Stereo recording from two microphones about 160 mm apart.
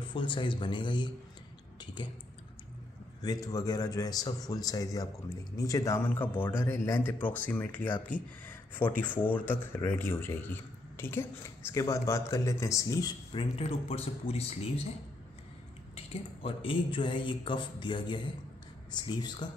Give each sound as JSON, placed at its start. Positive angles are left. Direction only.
{"t": 0.0, "sound": "speech", "side_deg": 30}
{"t": 3.2, "sound": "a man's voice", "side_deg": 25}
{"t": 15.9, "sound": "speech", "side_deg": 35}